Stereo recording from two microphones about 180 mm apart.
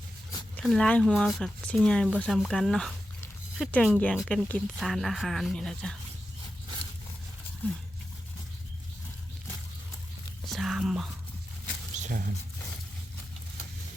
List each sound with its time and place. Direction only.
0.5 s speech: 5° left (ahead or behind)
10.4 s whispering: centre (ahead or behind)
11.9 s a sound: 40° right (ahead or behind)